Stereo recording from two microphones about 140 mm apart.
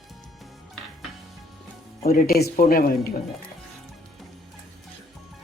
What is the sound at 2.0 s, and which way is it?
A woman's voice, 90° left.